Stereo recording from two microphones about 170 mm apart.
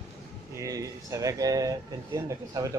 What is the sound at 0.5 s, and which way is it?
Speech, 20° right (ahead or behind).